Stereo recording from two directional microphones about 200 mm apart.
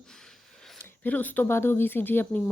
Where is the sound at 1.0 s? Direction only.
10° left (ahead or behind).